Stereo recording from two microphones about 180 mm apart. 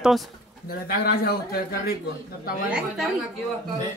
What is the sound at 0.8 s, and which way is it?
Speech, 55° left (ahead or behind).